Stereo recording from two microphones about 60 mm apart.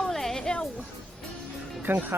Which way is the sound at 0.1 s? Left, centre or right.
Centre.